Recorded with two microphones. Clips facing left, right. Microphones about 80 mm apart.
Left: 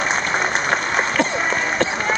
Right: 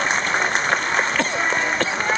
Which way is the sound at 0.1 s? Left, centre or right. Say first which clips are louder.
Left 1 dB; centre.